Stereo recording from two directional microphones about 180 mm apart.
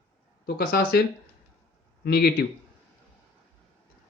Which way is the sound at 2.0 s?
60° left (ahead or behind).